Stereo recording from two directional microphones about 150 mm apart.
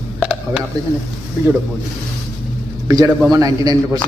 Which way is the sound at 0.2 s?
10° right (ahead or behind).